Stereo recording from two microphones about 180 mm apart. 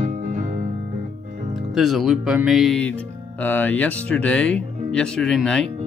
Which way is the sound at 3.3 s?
10° left (ahead or behind).